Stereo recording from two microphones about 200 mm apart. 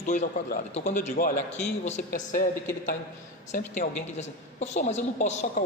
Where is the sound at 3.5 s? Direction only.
35° left (ahead or behind).